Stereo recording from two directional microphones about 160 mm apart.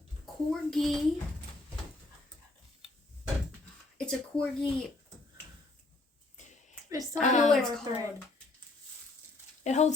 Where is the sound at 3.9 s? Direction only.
5° left (ahead or behind).